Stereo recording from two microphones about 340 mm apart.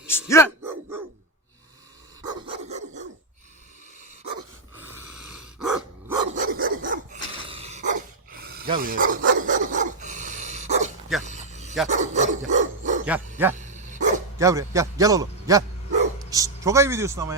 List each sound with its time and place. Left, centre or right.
0.1 s speech: centre
2.2 s dog: centre
4.9 s dog: centre
6.3 s dog: right
11.2 s a sound: right
11.9 s dog: right
13.1 s speech: centre
13.6 s dog: right
14.3 s a man's voice: centre